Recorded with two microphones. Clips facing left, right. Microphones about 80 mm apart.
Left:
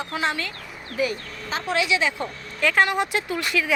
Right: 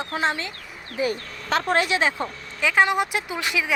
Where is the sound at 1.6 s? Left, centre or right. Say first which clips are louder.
Even; right.